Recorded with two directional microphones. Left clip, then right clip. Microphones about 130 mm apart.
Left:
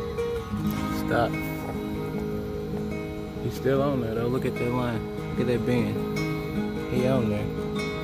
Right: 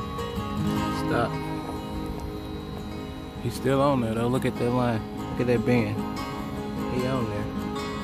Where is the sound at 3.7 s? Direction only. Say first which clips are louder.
Right 2 dB; 40° right (ahead or behind).